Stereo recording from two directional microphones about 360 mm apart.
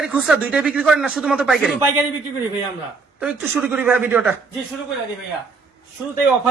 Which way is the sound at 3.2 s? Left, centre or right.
Centre.